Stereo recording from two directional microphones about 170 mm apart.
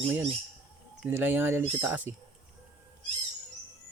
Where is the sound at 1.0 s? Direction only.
10° right (ahead or behind).